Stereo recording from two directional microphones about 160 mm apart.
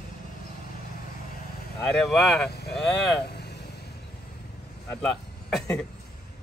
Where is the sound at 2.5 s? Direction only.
90° left.